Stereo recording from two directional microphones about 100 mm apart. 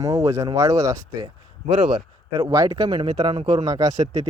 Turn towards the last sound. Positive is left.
turn(degrees=-35)  # may be behind; listen again after turning